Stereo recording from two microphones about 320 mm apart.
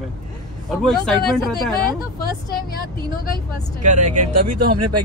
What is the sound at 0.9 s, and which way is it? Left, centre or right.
Speech, centre.